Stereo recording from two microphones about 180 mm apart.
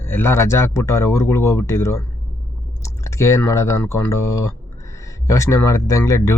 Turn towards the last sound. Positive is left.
turn(degrees=15)  # may be behind; listen again after turning